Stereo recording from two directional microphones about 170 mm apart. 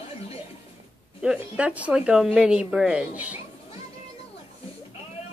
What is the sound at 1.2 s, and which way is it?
Speech, 5° right (ahead or behind).